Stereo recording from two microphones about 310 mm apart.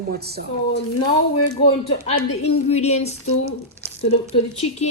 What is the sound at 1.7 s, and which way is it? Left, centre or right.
Speech, centre.